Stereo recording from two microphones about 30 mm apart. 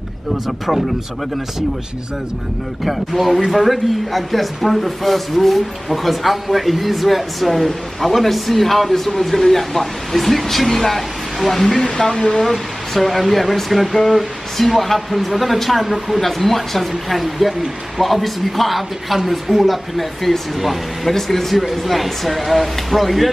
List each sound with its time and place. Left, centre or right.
2.8 s speech: centre
12.4 s speech: centre